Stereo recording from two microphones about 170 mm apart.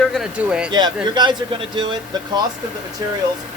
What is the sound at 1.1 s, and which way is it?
Speech, 25° right (ahead or behind).